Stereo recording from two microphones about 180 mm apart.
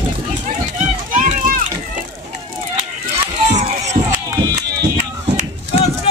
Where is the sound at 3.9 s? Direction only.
50° right (ahead or behind).